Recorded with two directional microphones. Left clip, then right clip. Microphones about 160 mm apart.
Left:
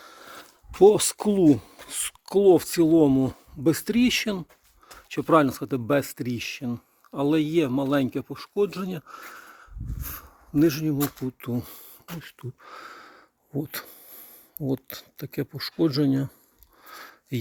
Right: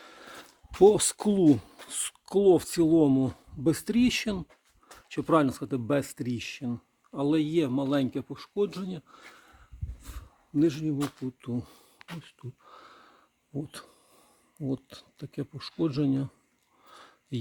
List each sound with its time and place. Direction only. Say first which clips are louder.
0.0 s a sound: left 3 dB; 30° right (ahead or behind)
0.8 s speech: left 3 dB; 5° right (ahead or behind); by 4.4 s 10° left (ahead or behind)
4.9 s speech: left 5 dB; 25° left (ahead or behind)
7.1 s speech: left 4 dB; 35° left (ahead or behind)
10.0 s a sound: left 11 dB; 35° left (ahead or behind)
11.3 s speech: left 4 dB; 25° left (ahead or behind)
16.8 s sniff: left 9 dB; 10° left (ahead or behind)